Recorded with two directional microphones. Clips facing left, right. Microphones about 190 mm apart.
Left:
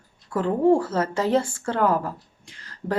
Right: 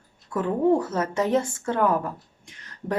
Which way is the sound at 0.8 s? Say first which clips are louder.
Left 1 dB; 20° right (ahead or behind).